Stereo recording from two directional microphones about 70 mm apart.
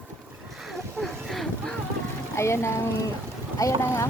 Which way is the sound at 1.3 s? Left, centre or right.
Centre.